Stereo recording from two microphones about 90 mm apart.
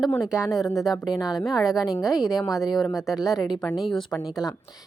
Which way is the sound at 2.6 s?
Centre (ahead or behind).